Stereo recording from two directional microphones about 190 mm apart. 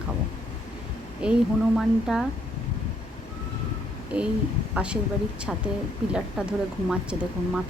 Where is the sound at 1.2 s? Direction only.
5° right (ahead or behind).